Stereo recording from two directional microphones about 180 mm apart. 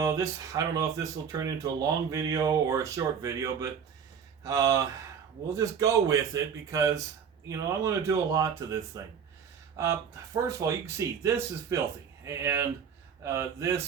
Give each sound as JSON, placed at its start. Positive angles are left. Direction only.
{"t": 0.0, "sound": "a man's voice", "side_deg": -20}